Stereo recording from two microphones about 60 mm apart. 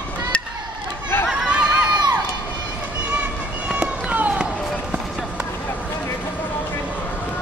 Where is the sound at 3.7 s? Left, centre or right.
Right.